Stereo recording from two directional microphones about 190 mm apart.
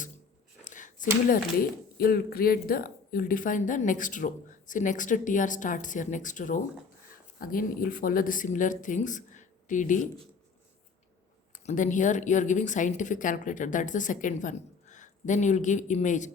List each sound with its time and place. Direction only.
0.6 s a sound: 40° left (ahead or behind)
2.0 s speech: 50° left (ahead or behind)
11.5 s speech: 40° left (ahead or behind)